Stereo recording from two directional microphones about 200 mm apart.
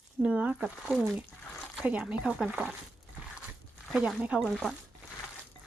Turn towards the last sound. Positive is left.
turn(degrees=0)  # may be behind; listen again after turning